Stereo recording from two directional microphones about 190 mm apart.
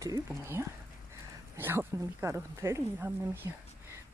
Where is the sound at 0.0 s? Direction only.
15° right (ahead or behind).